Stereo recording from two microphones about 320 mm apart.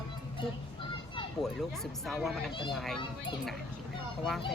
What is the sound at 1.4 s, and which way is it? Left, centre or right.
Speech, centre.